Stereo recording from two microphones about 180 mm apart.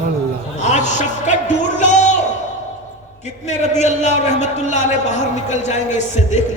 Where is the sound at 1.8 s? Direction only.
40° left (ahead or behind).